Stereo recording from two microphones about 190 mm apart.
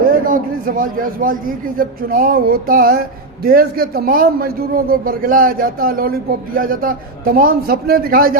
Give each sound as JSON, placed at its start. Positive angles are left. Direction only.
{"t": 0.1, "sound": "a man's voice", "side_deg": -45}